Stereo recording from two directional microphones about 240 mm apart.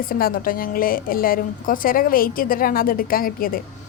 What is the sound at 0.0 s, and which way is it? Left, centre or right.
A woman's voice, left.